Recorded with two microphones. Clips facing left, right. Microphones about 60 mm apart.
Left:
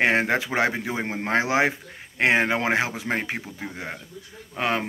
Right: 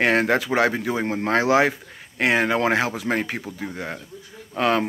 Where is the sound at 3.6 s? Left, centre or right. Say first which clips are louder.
Right 3 dB; centre.